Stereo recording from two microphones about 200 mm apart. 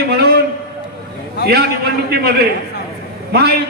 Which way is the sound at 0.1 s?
50° right (ahead or behind).